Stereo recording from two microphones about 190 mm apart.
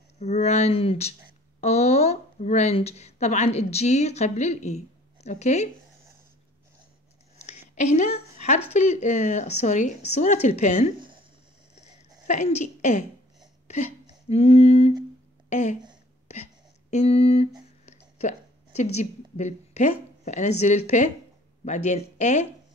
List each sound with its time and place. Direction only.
0.2 s a woman's voice: 35° left (ahead or behind)
7.4 s a sound: 40° left (ahead or behind)
8.7 s speech: 40° left (ahead or behind)
11.8 s a sound: 35° left (ahead or behind)
14.3 s speech: 30° left (ahead or behind)
16.9 s a woman's voice: 35° left (ahead or behind)